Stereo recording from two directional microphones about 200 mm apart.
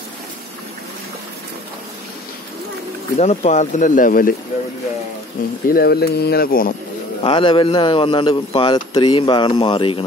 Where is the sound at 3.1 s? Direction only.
35° left (ahead or behind).